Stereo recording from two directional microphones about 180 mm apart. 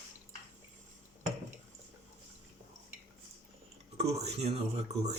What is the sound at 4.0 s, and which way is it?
Speech, 35° right (ahead or behind).